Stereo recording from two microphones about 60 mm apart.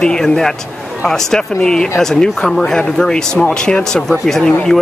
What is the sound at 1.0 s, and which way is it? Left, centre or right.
Speech, centre.